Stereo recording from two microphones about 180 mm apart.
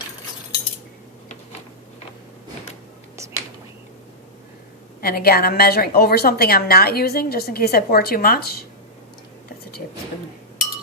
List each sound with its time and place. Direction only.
4.9 s a woman's voice: 55° left (ahead or behind)